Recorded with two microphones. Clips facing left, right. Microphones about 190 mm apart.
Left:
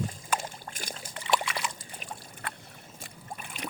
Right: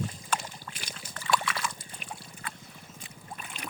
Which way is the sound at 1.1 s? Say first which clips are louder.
Even; 20° left (ahead or behind).